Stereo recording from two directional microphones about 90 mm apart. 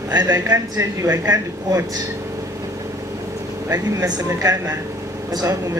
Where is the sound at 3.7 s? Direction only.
35° right (ahead or behind).